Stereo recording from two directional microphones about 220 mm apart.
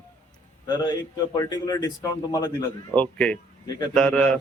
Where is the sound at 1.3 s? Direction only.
15° left (ahead or behind).